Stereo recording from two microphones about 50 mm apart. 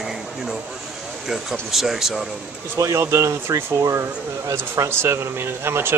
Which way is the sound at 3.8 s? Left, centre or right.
Right.